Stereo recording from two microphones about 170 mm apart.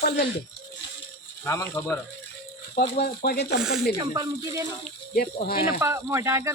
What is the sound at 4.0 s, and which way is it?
Speech, 20° right (ahead or behind).